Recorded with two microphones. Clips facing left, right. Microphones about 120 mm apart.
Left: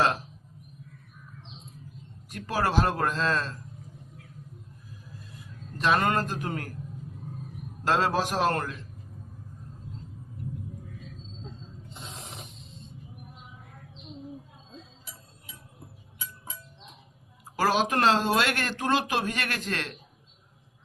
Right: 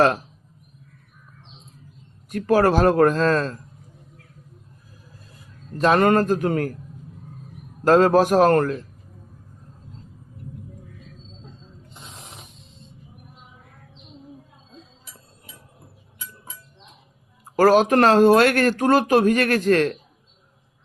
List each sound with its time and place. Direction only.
2.3 s speech: 50° right (ahead or behind)
5.4 s a man's voice: 40° right (ahead or behind)
7.9 s speech: 50° right (ahead or behind)
17.6 s speech: 50° right (ahead or behind)